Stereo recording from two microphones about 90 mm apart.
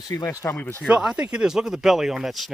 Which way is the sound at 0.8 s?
10° right (ahead or behind).